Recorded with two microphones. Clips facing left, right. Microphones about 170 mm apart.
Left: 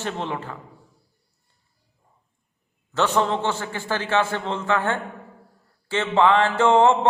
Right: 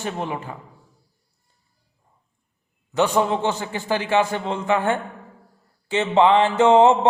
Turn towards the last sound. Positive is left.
turn(degrees=-15)  # may be behind; listen again after turning